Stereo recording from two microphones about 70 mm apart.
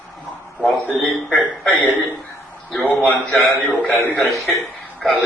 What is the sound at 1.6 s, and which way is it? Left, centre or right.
Speech, left.